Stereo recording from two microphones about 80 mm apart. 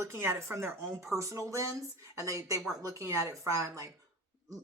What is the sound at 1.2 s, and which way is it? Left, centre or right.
Speech, right.